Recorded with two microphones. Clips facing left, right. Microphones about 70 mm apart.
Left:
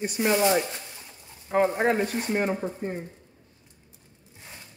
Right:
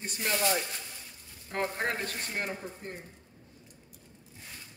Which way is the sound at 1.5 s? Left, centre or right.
Centre.